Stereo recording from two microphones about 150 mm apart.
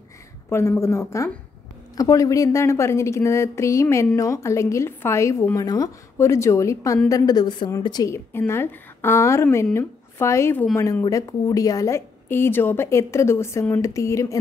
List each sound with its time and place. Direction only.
0.5 s a woman's voice: 20° left (ahead or behind)